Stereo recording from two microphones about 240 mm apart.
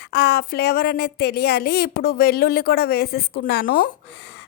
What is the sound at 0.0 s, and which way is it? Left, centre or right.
A woman's voice, left.